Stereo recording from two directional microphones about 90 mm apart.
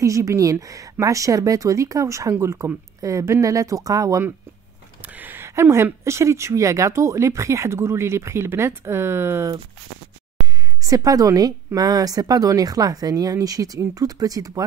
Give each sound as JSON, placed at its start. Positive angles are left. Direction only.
{"t": 0.0, "sound": "speech", "side_deg": -35}
{"t": 5.0, "sound": "a sound", "side_deg": -20}
{"t": 6.0, "sound": "speech", "side_deg": -30}
{"t": 10.4, "sound": "a woman's voice", "side_deg": -40}